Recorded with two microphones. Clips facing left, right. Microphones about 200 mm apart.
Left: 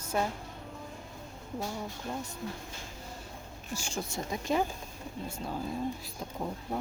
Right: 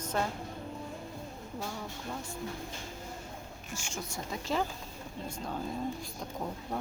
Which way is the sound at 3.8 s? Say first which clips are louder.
Left 4 dB; 35° left (ahead or behind).